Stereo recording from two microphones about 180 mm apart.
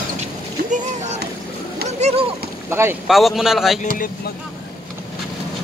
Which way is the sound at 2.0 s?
40° right (ahead or behind).